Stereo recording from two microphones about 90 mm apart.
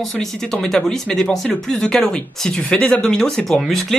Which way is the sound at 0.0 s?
5° left (ahead or behind).